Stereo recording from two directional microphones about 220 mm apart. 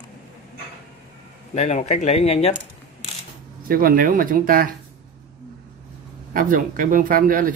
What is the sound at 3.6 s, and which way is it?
Speech, 40° right (ahead or behind).